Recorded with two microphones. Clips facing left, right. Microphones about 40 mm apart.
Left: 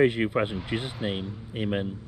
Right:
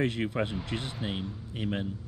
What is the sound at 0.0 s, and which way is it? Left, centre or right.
Speech, centre.